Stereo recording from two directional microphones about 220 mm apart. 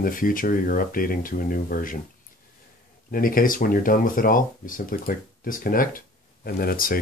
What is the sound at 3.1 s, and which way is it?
Speech, 40° left (ahead or behind).